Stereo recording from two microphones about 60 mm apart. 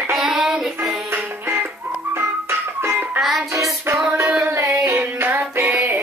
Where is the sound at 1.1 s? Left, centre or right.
Right.